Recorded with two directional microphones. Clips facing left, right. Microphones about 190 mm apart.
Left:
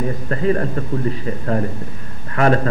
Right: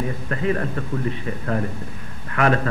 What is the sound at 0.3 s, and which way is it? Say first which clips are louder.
A man's voice: left 5 dB; 35° left (ahead or behind).